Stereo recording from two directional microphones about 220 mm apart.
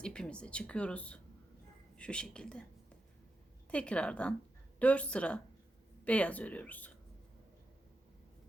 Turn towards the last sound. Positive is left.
turn(degrees=5)  # may be behind; listen again after turning